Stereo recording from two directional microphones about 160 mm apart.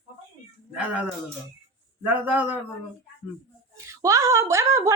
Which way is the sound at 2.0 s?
10° right (ahead or behind).